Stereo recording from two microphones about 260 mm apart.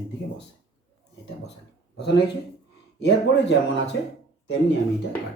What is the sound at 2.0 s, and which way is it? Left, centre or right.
Speech, left.